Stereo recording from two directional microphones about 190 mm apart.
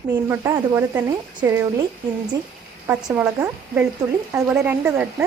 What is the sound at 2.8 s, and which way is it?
Speech, 10° right (ahead or behind).